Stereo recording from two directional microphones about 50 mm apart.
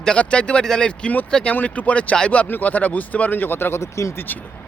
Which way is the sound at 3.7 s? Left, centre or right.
Left.